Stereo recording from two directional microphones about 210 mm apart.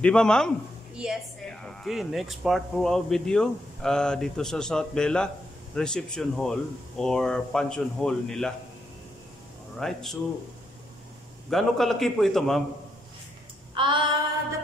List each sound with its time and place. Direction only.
0.0 s speech: 5° left (ahead or behind)
9.8 s speech: centre (ahead or behind)
11.5 s speech: centre (ahead or behind)
13.7 s female singing: 25° right (ahead or behind)